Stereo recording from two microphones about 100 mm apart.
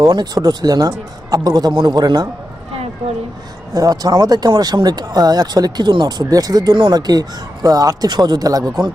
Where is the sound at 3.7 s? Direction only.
35° right (ahead or behind).